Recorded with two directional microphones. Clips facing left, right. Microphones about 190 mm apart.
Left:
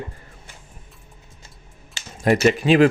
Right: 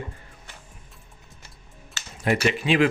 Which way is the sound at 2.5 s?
40° left (ahead or behind).